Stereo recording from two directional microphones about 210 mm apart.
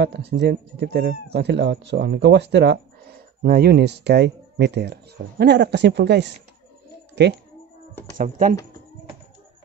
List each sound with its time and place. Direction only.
0.0 s speech: 55° right (ahead or behind)
8.2 s speech: 40° right (ahead or behind)